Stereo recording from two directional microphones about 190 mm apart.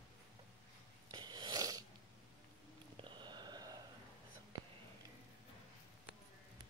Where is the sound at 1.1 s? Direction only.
20° right (ahead or behind).